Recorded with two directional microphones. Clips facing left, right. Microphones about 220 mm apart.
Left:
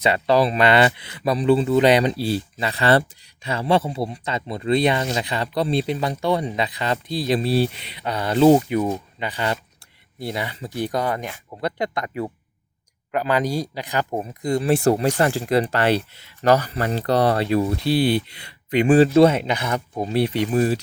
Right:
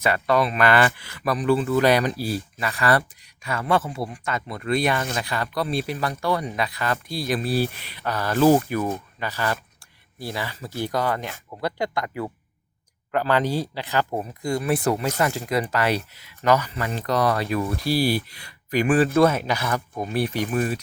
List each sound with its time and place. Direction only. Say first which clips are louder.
0.0 s speech: left 3 dB; 25° left (ahead or behind)